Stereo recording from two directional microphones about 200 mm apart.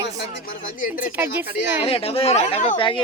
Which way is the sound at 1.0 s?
10° right (ahead or behind).